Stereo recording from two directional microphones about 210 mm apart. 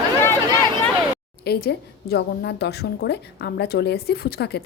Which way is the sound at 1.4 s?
50° left (ahead or behind).